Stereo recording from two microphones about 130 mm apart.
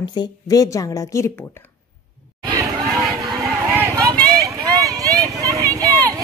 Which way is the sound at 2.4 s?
25° right (ahead or behind).